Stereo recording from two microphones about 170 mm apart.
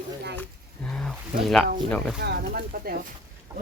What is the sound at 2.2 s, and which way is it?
Speech, 70° right (ahead or behind).